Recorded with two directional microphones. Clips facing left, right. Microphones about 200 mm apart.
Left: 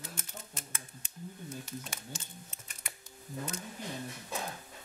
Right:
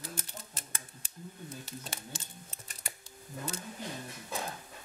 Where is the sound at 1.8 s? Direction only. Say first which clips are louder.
Right 1 dB; 35° right (ahead or behind).